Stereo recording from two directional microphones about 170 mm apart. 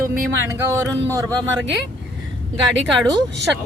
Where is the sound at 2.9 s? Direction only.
Centre (ahead or behind).